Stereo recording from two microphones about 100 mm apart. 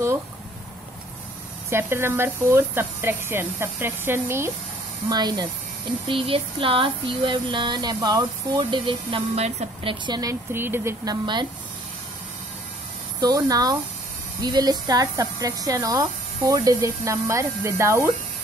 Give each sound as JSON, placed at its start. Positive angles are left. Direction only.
{"t": 1.7, "sound": "speech", "side_deg": -25}
{"t": 5.1, "sound": "speech", "side_deg": -40}
{"t": 6.0, "sound": "speech", "side_deg": -60}
{"t": 7.5, "sound": "speech", "side_deg": -45}
{"t": 9.3, "sound": "a woman's voice", "side_deg": -90}
{"t": 10.0, "sound": "speech", "side_deg": -40}
{"t": 10.5, "sound": "speech", "side_deg": -25}
{"t": 11.1, "sound": "speech", "side_deg": -50}
{"t": 13.2, "sound": "speech", "side_deg": -40}